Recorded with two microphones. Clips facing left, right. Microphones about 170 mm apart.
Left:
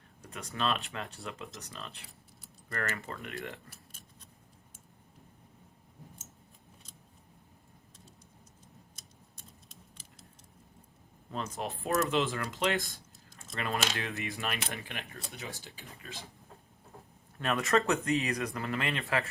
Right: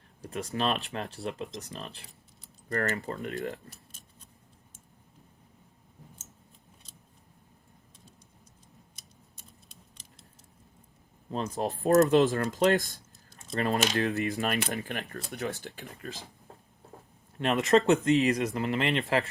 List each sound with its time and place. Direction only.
0.2 s speech: 30° right (ahead or behind)
11.3 s speech: 35° right (ahead or behind)
15.6 s speech: 60° right (ahead or behind)
15.9 s speech: 40° right (ahead or behind)
17.3 s speech: 25° right (ahead or behind)